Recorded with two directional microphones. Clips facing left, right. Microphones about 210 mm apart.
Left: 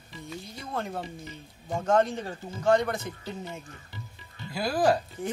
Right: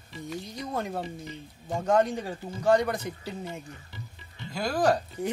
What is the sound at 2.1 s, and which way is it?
Speech, 10° right (ahead or behind).